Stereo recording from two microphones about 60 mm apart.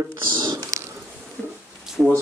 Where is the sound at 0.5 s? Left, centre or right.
Right.